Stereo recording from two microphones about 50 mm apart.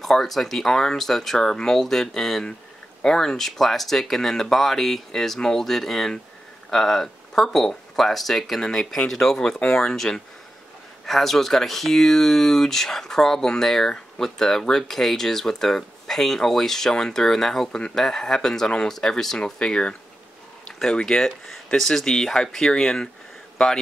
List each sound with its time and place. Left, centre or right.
0.0 s speech: centre